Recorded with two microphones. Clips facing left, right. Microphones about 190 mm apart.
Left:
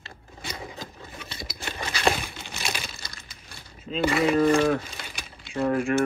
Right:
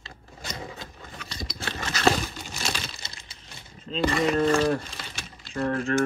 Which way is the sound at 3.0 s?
25° right (ahead or behind).